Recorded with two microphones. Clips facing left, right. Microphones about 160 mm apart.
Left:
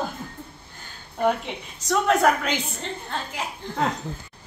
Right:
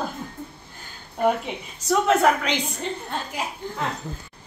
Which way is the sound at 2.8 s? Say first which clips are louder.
Right 2 dB; 10° right (ahead or behind).